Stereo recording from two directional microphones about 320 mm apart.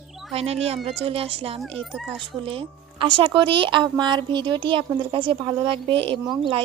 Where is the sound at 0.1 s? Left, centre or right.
Centre.